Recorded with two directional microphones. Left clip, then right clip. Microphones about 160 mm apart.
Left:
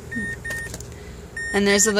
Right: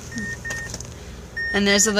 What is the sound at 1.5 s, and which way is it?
Speech, 20° left (ahead or behind).